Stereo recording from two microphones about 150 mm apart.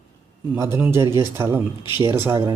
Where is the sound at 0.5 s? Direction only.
15° right (ahead or behind).